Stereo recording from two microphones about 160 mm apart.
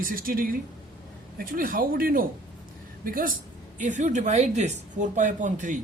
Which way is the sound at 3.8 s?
50° right (ahead or behind).